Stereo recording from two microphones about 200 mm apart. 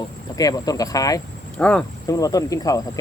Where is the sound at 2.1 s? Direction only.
15° left (ahead or behind).